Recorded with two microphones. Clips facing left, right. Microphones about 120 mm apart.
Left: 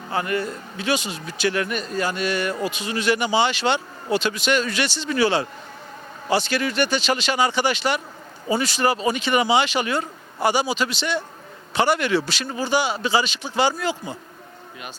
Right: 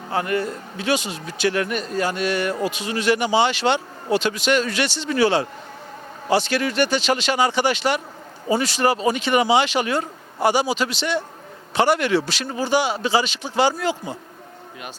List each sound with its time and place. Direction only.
0.1 s speech: 45° right (ahead or behind); by 8.0 s 60° right (ahead or behind)
8.4 s speech: 45° right (ahead or behind)
12.7 s speech: 55° right (ahead or behind)